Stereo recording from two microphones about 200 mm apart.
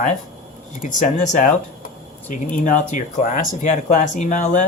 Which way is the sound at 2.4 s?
40° left (ahead or behind).